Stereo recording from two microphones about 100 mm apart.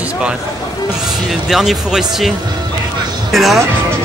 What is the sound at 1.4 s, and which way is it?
Speech, 5° right (ahead or behind).